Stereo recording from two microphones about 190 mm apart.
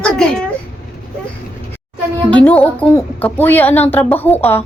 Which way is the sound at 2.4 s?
10° left (ahead or behind).